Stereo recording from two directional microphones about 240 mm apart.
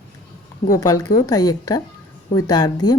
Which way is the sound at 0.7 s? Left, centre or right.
Centre.